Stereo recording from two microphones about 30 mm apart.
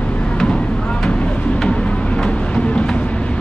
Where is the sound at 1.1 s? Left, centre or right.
Left.